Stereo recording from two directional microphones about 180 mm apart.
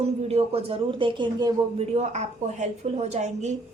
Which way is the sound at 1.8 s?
35° right (ahead or behind).